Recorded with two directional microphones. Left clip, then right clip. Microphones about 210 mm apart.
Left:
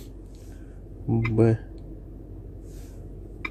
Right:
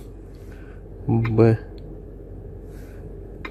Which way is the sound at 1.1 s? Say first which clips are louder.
Right 4 dB; centre (ahead or behind).